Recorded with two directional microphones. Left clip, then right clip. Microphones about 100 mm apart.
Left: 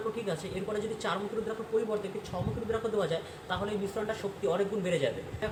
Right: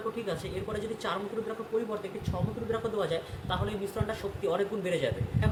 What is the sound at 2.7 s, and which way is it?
A man's voice, 20° right (ahead or behind).